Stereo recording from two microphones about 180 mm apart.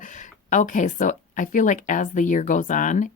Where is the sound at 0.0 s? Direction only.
45° left (ahead or behind).